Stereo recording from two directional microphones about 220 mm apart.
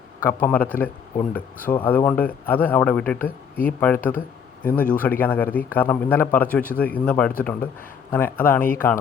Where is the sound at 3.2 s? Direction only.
40° left (ahead or behind).